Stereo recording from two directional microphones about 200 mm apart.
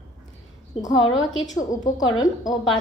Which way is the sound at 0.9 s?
75° left (ahead or behind).